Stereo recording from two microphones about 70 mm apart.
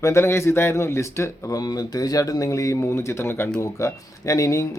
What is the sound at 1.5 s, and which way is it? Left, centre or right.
Speech, left.